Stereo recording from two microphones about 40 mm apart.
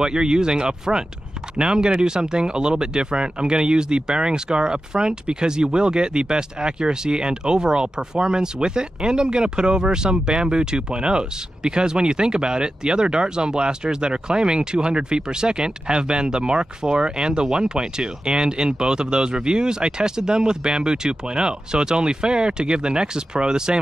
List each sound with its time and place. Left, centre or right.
0.0 s speech: centre